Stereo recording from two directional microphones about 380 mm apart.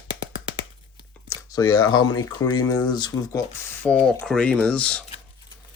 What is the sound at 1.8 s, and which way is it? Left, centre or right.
Speech, left.